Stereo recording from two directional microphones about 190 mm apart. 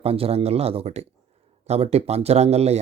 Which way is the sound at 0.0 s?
30° right (ahead or behind).